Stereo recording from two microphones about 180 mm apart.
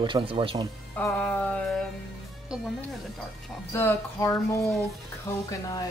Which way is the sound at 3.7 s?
15° left (ahead or behind).